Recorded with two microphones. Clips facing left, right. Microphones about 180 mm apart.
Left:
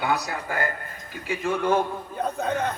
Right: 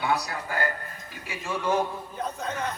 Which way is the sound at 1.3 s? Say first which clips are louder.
Left 4 dB; 55° left (ahead or behind).